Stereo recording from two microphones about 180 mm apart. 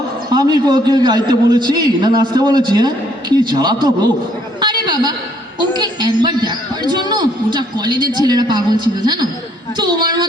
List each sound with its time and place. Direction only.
0.3 s a man's voice: 25° right (ahead or behind)
4.6 s a sound: 25° right (ahead or behind)
5.5 s a man's voice: 25° right (ahead or behind)